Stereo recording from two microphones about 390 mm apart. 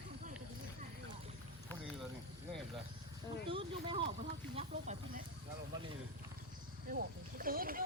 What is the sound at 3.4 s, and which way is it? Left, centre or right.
Speech, centre.